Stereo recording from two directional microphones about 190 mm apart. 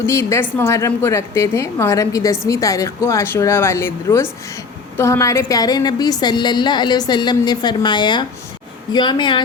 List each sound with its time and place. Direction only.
0.0 s a woman's voice: 15° left (ahead or behind)